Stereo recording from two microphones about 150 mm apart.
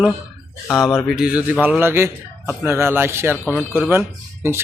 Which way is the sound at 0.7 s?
Centre (ahead or behind).